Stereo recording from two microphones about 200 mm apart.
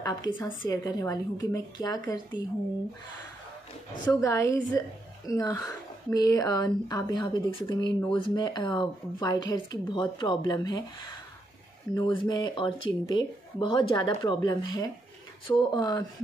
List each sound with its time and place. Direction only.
0.0 s a woman's voice: 20° left (ahead or behind)
4.1 s a woman's voice: 15° left (ahead or behind)
11.9 s speech: 20° left (ahead or behind)